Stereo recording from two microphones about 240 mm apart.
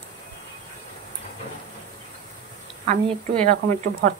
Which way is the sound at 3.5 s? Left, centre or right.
Right.